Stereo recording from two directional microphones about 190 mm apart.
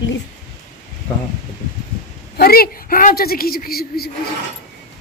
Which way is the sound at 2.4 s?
50° left (ahead or behind).